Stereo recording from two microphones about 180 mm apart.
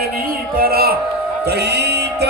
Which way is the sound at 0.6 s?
60° right (ahead or behind).